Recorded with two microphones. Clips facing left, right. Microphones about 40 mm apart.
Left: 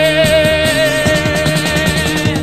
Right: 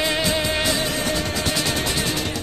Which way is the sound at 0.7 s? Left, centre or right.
Left.